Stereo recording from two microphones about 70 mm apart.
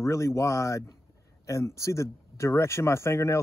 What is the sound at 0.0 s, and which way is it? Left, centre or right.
Speech, left.